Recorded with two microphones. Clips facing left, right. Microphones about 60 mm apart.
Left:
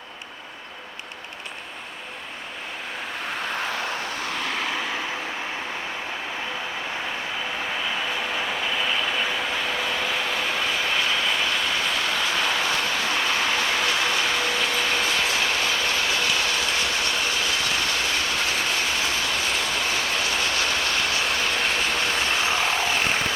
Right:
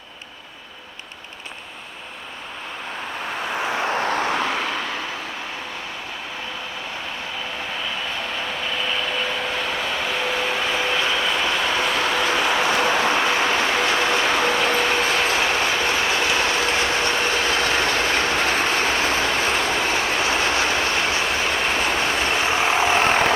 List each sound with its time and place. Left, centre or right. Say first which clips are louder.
3.5 s vehicle: right 6 dB; centre
3.8 s vehicle: right 7 dB; right
4.7 s vehicle: right 1 dB; centre
8.8 s vehicle: right 2 dB; centre
11.8 s a sound: right 4 dB; right
12.4 s applause: right 4 dB; right
12.8 s vehicle: right 6 dB; right